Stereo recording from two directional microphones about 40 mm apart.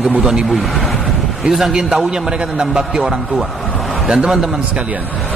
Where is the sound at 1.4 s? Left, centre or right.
Centre.